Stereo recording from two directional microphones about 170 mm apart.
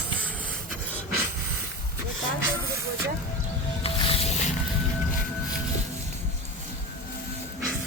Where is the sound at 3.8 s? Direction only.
35° left (ahead or behind).